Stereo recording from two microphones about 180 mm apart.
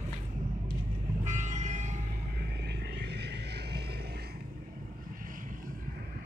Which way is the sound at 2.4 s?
65° right (ahead or behind).